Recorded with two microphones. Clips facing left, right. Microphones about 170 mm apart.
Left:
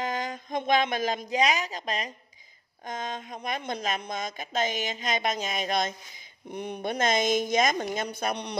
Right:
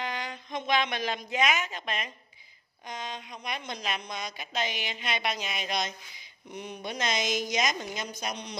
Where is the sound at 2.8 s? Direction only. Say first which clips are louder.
Left 4 dB; 45° left (ahead or behind).